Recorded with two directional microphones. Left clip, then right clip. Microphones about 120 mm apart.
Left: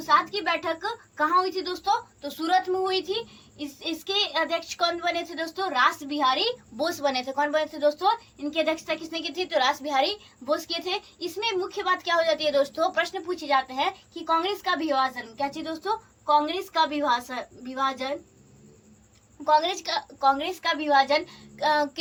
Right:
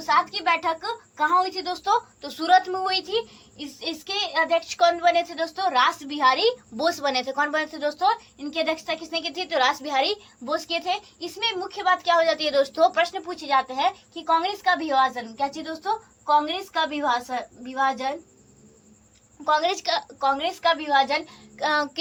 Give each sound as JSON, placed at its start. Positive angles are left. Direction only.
{"t": 0.1, "sound": "a woman's voice", "side_deg": -25}
{"t": 3.8, "sound": "a woman's voice", "side_deg": -25}
{"t": 19.5, "sound": "a woman's voice", "side_deg": -25}